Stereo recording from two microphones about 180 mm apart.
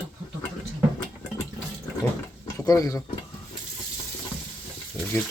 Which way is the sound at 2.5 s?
20° left (ahead or behind).